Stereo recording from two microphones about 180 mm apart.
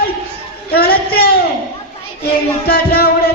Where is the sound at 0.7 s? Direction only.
60° left (ahead or behind).